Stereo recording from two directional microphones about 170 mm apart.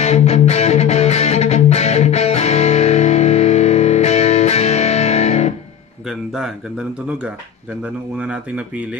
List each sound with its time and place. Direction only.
0.0 s music: 40° left (ahead or behind)
6.0 s music: centre (ahead or behind)
7.8 s speech: 5° right (ahead or behind)